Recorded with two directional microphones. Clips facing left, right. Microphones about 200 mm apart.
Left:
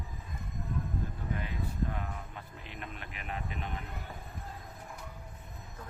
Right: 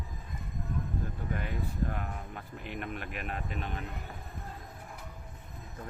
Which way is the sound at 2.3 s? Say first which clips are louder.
Right 6 dB; 55° right (ahead or behind).